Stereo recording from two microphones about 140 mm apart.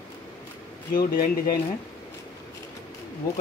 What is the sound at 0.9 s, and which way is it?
Speech, 90° left.